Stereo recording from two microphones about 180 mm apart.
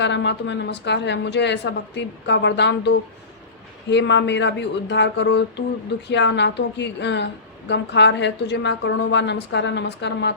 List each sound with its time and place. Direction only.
0.0 s a woman's voice: 80° left